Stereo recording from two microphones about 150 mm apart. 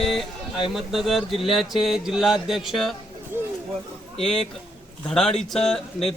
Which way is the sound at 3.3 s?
15° right (ahead or behind).